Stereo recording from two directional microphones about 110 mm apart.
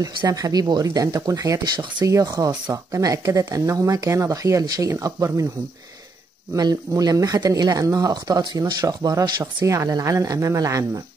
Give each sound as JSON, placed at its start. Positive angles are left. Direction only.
{"t": 0.3, "sound": "speech", "side_deg": -35}
{"t": 6.5, "sound": "speech", "side_deg": -35}